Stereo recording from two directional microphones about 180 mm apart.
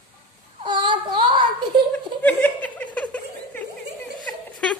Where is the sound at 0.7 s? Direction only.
25° right (ahead or behind).